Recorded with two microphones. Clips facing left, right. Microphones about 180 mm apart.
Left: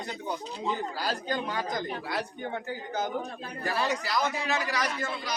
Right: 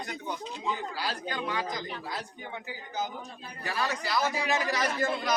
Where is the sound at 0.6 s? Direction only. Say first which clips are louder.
Left 3 dB; 45° left (ahead or behind).